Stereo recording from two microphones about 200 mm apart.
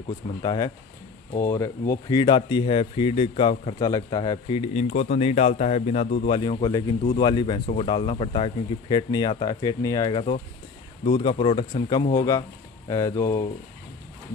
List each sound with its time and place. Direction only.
0.4 s speech: 20° left (ahead or behind); by 6.2 s 35° left (ahead or behind)
6.2 s speech: 25° left (ahead or behind)